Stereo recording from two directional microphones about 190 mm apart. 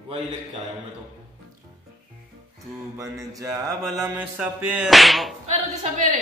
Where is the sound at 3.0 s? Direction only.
15° right (ahead or behind).